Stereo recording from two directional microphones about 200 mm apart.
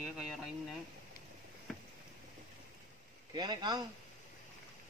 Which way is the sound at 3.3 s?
20° right (ahead or behind).